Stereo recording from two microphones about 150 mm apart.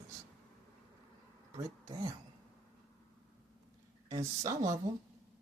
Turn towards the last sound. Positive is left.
turn(degrees=-20)  # may be behind; listen again after turning